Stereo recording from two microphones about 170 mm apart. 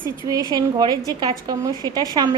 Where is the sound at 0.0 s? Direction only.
20° right (ahead or behind).